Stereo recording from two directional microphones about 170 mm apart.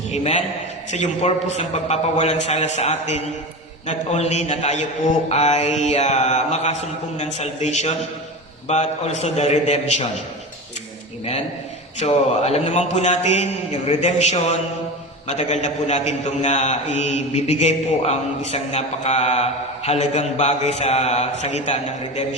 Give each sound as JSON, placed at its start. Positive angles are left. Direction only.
{"t": 0.1, "sound": "a man's voice", "side_deg": 40}
{"t": 11.9, "sound": "a man's voice", "side_deg": 40}